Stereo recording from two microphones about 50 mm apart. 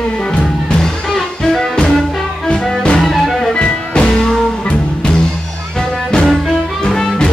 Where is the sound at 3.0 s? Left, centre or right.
Centre.